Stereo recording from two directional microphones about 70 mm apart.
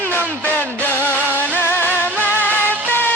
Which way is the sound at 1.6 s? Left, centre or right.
Left.